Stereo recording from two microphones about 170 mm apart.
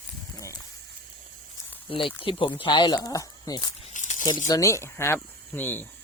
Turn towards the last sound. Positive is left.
turn(degrees=10)  # may be behind; listen again after turning